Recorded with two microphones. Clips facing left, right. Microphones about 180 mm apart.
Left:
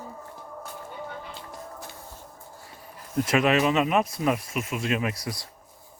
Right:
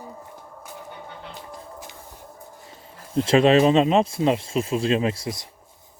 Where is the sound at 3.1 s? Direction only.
30° right (ahead or behind).